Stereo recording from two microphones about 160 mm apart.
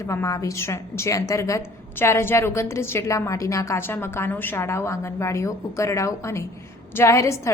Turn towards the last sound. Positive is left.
turn(degrees=20)  # may be behind; listen again after turning